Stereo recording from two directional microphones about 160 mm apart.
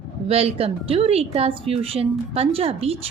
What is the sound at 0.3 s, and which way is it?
A woman's voice, 40° right (ahead or behind).